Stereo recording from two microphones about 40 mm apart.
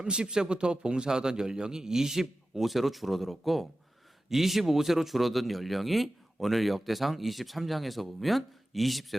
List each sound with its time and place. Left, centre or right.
0.0 s a man's voice: right; by 9.1 s centre